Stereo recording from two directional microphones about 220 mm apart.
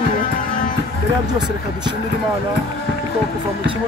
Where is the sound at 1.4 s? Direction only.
20° right (ahead or behind).